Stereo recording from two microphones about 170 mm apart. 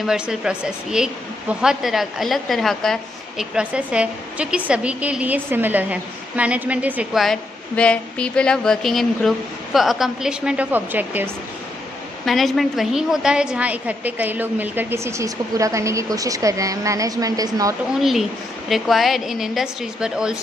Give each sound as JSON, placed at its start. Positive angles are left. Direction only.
{"t": 0.0, "sound": "speech", "side_deg": -5}
{"t": 12.3, "sound": "a woman's voice", "side_deg": 0}
{"t": 18.7, "sound": "speech", "side_deg": 0}